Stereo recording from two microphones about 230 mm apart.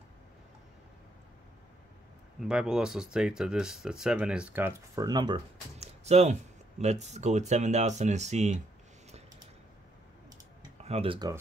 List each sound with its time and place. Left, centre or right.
2.4 s speech: centre; by 8.5 s right
10.8 s speech: right